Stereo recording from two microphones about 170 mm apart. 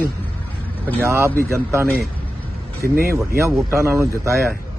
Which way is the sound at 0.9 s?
15° right (ahead or behind).